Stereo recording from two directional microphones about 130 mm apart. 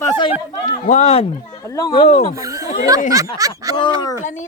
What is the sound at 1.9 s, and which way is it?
Speech, 50° left (ahead or behind).